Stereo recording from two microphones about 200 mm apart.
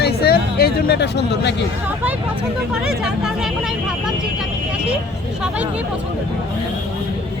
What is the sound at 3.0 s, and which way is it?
Speech, centre (ahead or behind).